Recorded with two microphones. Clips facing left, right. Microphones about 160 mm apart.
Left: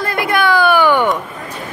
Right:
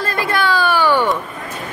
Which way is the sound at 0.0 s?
15° left (ahead or behind).